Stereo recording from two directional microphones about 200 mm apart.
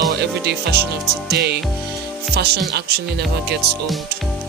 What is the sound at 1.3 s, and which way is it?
Speech, 55° right (ahead or behind).